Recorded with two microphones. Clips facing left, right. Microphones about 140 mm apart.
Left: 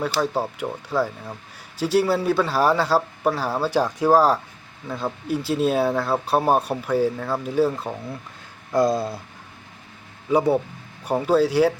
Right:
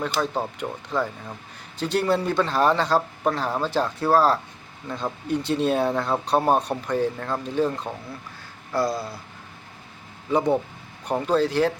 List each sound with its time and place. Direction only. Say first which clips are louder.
0.0 s speech: left 2 dB; 10° left (ahead or behind)
8.7 s a sound: left 5 dB; 20° left (ahead or behind)
10.3 s speech: left 2 dB; 10° left (ahead or behind)